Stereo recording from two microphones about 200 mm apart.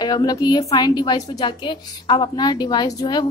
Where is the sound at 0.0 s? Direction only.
20° left (ahead or behind).